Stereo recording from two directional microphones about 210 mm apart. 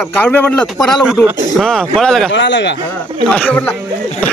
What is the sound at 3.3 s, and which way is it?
Speech, 5° left (ahead or behind).